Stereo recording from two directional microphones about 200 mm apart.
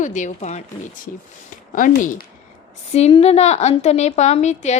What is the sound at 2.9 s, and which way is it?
A woman's voice, 30° left (ahead or behind).